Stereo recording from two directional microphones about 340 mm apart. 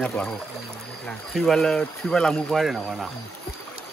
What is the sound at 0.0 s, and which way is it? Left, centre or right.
Speech, centre.